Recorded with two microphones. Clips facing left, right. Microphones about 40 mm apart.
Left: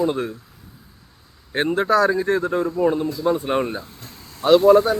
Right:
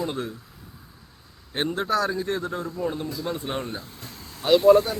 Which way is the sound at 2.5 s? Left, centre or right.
Centre.